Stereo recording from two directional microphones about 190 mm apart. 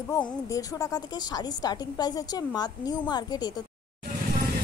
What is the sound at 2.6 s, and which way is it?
Speech, 20° left (ahead or behind).